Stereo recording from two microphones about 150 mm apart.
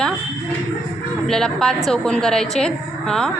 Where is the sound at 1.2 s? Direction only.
5° left (ahead or behind).